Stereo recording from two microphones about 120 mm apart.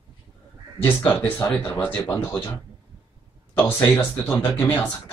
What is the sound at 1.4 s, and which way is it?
Speech, 25° left (ahead or behind).